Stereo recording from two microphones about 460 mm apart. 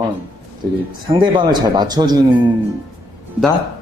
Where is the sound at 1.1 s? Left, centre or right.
Centre.